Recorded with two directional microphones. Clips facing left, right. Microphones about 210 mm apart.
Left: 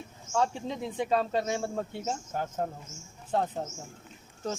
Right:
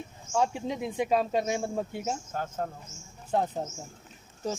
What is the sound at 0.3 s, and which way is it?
Speech, 10° right (ahead or behind).